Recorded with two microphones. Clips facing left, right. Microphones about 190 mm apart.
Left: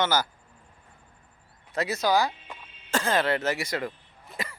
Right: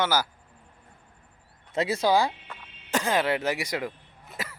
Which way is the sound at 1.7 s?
25° right (ahead or behind).